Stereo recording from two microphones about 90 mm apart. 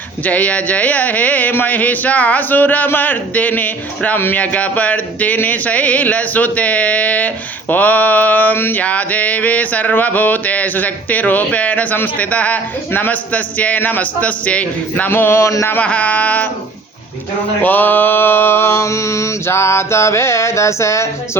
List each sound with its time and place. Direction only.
0.3 s speech: 15° left (ahead or behind)
15.8 s speech: 15° left (ahead or behind)
17.6 s mantra: 20° left (ahead or behind)